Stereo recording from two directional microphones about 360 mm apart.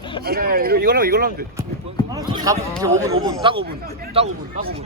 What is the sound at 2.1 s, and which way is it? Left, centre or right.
Speech, centre.